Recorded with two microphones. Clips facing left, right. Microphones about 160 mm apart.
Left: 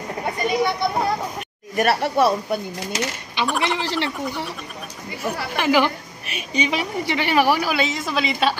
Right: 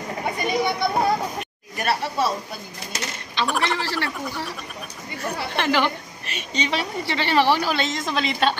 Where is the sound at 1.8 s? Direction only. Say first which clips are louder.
Left 5 dB; 60° left (ahead or behind).